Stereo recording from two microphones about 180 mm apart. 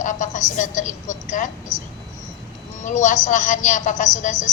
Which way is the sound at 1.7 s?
20° left (ahead or behind).